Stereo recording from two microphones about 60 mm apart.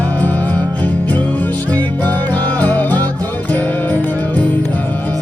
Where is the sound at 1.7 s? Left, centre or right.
Left.